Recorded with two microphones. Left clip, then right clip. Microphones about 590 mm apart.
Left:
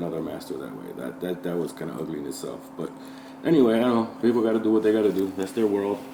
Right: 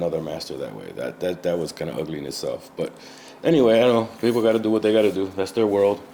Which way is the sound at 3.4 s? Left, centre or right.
Right.